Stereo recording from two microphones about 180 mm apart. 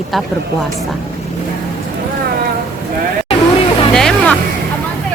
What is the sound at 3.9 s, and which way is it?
Music, 5° left (ahead or behind).